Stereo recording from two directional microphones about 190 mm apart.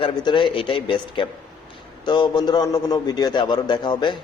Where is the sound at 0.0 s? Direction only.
25° left (ahead or behind).